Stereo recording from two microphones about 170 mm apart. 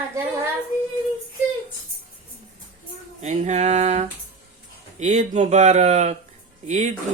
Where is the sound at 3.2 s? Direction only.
45° right (ahead or behind).